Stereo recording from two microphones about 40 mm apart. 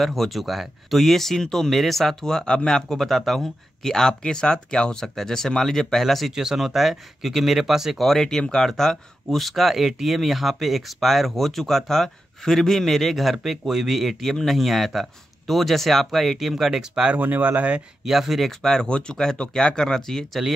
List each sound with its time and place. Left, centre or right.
0.0 s speech: centre
3.8 s speech: centre
5.0 s speech: centre
6.3 s speech: centre
8.0 s speech: centre
17.2 s speech: right
18.0 s speech: centre
18.6 s speech: centre
18.9 s speech: left